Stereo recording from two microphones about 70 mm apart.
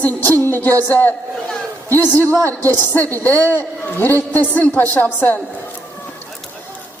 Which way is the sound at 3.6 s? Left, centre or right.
Left.